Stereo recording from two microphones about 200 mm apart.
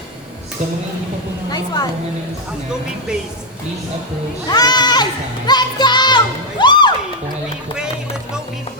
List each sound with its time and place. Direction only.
1.5 s a woman's voice: 20° left (ahead or behind)
4.4 s speech: 20° left (ahead or behind)
5.5 s music: 20° left (ahead or behind)